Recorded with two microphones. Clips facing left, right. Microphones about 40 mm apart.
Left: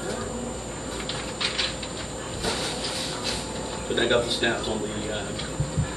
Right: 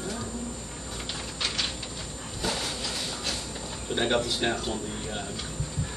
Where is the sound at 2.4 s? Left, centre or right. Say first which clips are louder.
Left 2 dB; centre.